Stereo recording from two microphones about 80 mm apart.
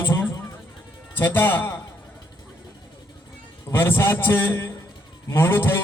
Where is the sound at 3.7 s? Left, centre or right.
Left.